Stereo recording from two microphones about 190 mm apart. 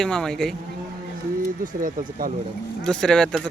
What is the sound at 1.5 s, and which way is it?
Speech, 45° right (ahead or behind).